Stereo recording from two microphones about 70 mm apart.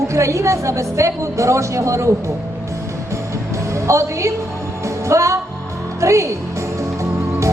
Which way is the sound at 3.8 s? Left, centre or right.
Right.